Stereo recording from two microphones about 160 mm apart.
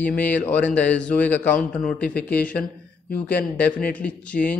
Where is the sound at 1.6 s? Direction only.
55° left (ahead or behind).